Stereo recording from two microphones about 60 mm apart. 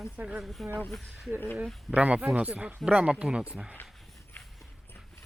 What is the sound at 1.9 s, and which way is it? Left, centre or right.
Speech, right.